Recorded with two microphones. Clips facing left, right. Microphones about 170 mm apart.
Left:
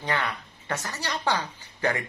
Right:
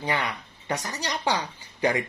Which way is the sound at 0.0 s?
15° right (ahead or behind).